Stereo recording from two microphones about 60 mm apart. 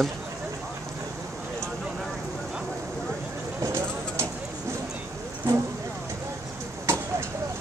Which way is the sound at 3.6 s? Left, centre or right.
Right.